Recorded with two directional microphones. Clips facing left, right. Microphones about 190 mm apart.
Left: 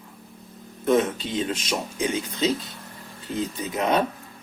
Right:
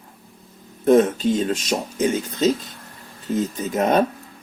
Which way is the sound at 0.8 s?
45° right (ahead or behind).